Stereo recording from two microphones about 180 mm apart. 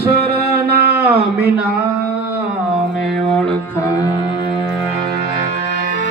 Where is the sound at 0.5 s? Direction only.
60° right (ahead or behind).